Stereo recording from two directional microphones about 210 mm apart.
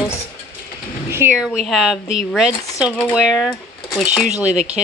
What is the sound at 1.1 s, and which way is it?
A woman's voice, 5° right (ahead or behind).